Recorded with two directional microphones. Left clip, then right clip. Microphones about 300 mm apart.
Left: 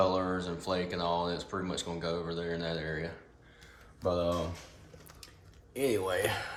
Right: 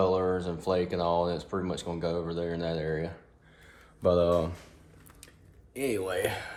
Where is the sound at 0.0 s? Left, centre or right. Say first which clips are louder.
Right 3 dB; centre.